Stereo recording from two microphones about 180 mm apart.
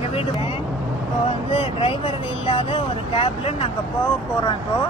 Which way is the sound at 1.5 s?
30° left (ahead or behind).